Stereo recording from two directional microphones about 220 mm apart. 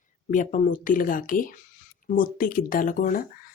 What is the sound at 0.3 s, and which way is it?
A woman's voice, 35° left (ahead or behind).